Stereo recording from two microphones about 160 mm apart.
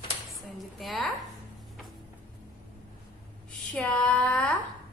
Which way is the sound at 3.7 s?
5° left (ahead or behind).